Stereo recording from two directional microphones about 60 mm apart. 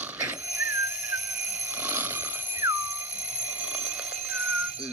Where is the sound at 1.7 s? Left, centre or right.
Right; by 4.4 s centre.